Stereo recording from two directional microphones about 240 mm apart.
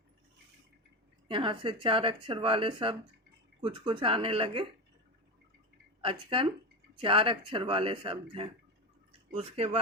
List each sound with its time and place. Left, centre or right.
1.3 s speech: right
6.0 s speech: right